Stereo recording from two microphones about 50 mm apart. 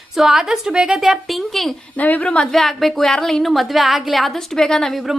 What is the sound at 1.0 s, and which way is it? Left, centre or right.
Speech, centre.